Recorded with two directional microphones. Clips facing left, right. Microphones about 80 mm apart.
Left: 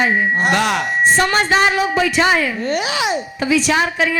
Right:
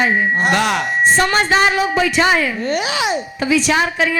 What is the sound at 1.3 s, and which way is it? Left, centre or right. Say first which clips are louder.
A woman's voice: even; right.